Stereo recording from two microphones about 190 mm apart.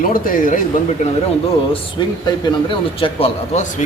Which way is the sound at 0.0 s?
45° left (ahead or behind).